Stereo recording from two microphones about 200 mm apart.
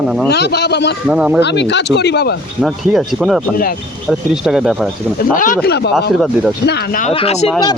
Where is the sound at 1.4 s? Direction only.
60° left (ahead or behind).